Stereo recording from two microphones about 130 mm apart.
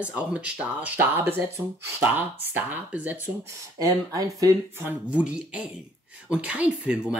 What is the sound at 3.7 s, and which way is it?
Speech, 25° right (ahead or behind).